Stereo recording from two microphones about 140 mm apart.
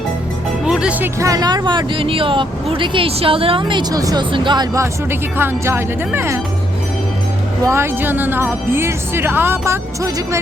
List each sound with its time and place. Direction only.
0.6 s music: 5° right (ahead or behind)
1.2 s speech: 25° right (ahead or behind)
7.6 s speech: 20° right (ahead or behind)